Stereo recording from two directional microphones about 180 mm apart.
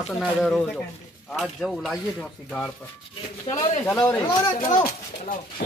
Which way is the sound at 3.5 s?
30° left (ahead or behind).